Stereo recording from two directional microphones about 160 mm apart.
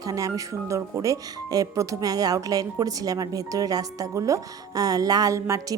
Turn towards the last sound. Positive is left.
turn(degrees=-20)  # may be behind; listen again after turning